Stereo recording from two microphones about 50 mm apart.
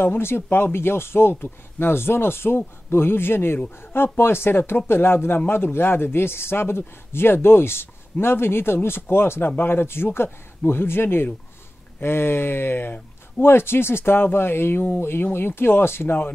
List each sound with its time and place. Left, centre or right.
0.0 s speech: left